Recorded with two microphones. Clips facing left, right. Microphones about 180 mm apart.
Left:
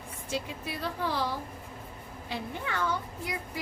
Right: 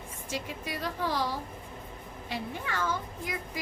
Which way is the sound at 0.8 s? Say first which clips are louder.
Even; 15° right (ahead or behind).